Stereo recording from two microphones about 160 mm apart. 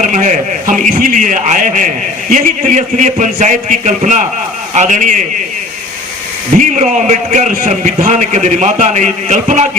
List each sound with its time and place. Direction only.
0.0 s a man's voice: 50° right (ahead or behind)
6.6 s a man's voice: 50° right (ahead or behind)